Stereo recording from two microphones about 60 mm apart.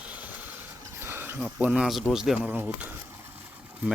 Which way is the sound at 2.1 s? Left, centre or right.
Centre.